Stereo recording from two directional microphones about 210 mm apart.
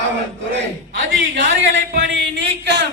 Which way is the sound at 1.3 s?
60° right (ahead or behind).